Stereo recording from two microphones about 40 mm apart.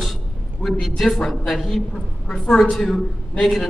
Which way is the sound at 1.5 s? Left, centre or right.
Centre.